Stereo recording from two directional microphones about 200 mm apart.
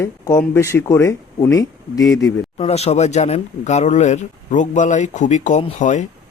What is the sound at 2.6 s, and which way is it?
Speech, 30° left (ahead or behind).